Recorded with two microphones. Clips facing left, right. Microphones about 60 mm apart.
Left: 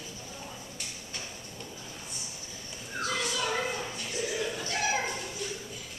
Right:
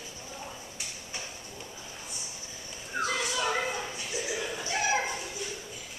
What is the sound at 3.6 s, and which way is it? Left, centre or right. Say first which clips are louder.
Dog: right 1 dB; centre.